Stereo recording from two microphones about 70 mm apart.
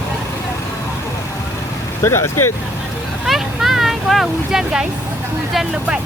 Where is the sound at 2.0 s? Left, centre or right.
Left.